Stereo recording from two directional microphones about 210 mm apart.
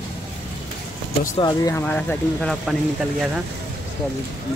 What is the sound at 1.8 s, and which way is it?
Speech, 5° left (ahead or behind).